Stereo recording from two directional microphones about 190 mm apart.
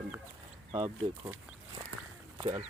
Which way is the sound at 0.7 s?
30° right (ahead or behind).